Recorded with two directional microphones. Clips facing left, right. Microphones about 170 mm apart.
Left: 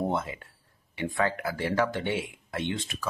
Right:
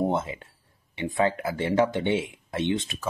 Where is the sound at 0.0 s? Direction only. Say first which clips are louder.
Right 3 dB; 20° right (ahead or behind).